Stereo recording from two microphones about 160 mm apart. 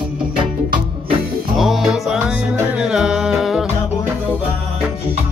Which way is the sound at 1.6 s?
Centre (ahead or behind).